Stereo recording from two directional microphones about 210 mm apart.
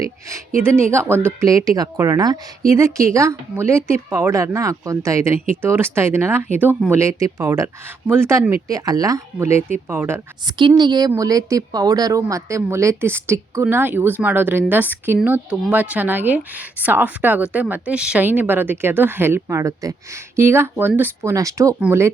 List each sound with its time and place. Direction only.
0.9 s speech: 10° right (ahead or behind)